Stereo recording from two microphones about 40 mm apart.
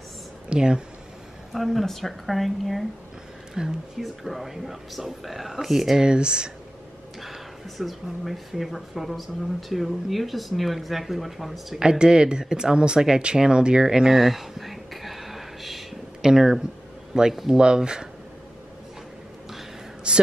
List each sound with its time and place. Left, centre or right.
0.5 s speech: right
1.5 s speech: centre
6.0 s speech: right
7.2 s speech: centre
11.8 s speech: right
13.2 s a sound: right; by 15.8 s centre
16.2 s speech: centre
20.1 s speech: right